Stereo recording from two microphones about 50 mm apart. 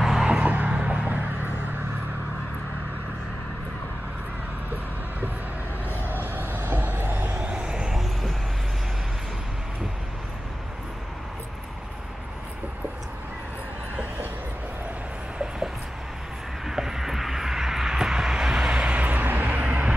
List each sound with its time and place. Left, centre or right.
0.0 s music: centre
0.3 s music: right
6.3 s vehicle: right
7.2 s vehicle: right
7.9 s vehicle: centre
16.6 s vehicle: centre; by 19.9 s right